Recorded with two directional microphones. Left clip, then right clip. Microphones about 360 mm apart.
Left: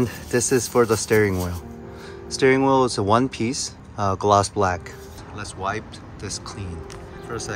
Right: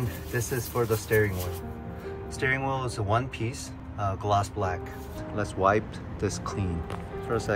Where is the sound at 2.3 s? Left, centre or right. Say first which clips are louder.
Left 11 dB; centre.